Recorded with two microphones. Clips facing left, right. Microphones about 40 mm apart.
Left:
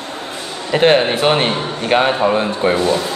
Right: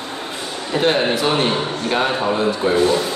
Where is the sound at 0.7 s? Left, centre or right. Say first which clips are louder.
Left 5 dB; left.